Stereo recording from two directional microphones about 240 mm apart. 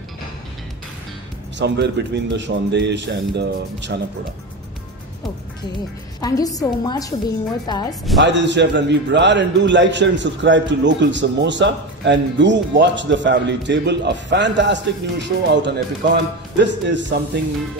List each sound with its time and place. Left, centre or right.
1.6 s a man's voice: right
6.2 s a woman's voice: centre
8.2 s a man's voice: right